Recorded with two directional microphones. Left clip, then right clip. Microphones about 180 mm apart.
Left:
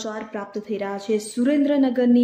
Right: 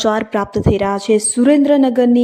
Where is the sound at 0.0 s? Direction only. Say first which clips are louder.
Right 14 dB; 55° right (ahead or behind).